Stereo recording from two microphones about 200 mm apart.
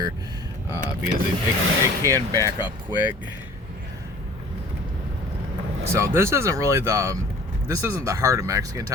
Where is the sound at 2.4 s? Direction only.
25° left (ahead or behind).